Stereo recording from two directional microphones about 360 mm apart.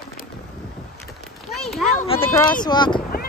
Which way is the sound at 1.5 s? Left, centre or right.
Centre.